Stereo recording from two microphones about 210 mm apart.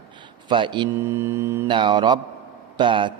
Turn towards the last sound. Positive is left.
turn(degrees=-25)  # may be behind; listen again after turning